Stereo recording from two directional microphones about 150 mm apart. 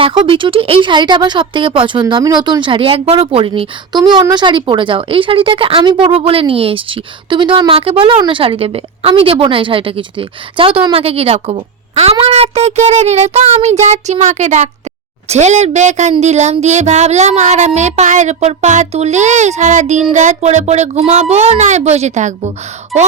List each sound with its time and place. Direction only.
0.0 s speech: 35° right (ahead or behind)
12.2 s child singing: 40° right (ahead or behind)
22.9 s speech: centre (ahead or behind)